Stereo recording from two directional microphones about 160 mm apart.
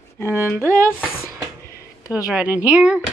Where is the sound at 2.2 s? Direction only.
5° right (ahead or behind).